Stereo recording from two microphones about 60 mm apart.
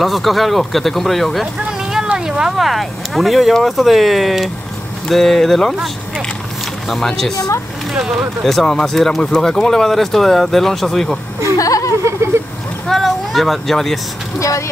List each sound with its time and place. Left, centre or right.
0.0 s speech: centre
1.7 s a sound: centre
2.0 s speech: centre
6.9 s speech: centre
8.5 s speech: centre
11.5 s a sound: left
12.8 s speech: centre